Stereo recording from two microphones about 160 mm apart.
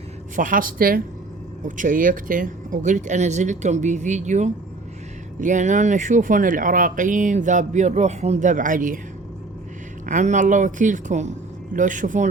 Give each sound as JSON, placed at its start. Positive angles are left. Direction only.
{"t": 0.3, "sound": "speech", "side_deg": -60}
{"t": 10.1, "sound": "speech", "side_deg": -50}